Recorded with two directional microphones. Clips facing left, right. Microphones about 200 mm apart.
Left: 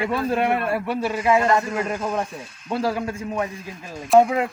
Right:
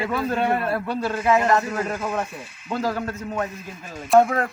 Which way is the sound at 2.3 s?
10° right (ahead or behind).